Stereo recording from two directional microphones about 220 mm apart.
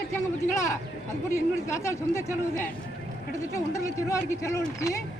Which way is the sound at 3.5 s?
15° left (ahead or behind).